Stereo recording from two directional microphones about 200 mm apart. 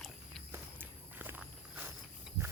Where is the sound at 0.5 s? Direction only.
10° right (ahead or behind).